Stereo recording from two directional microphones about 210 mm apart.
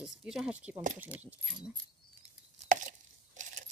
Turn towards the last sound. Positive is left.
turn(degrees=-35)  # may be behind; listen again after turning